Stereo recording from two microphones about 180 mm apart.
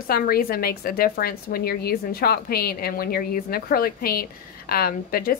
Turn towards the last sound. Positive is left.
turn(degrees=55)  # may be behind; listen again after turning